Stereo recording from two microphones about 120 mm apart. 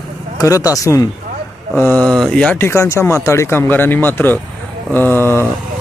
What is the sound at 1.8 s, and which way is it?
Speech, 10° left (ahead or behind).